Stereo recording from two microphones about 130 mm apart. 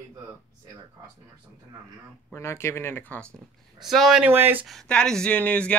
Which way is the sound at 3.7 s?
Centre (ahead or behind).